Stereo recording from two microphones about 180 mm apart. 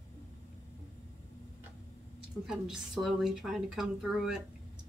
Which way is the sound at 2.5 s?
Centre (ahead or behind).